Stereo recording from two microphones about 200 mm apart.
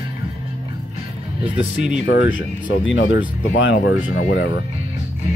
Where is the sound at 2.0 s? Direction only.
60° left (ahead or behind).